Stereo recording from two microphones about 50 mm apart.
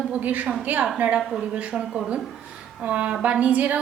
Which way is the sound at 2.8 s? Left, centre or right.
Right.